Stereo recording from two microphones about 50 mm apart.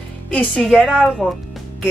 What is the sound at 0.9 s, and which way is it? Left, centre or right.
Speech, centre.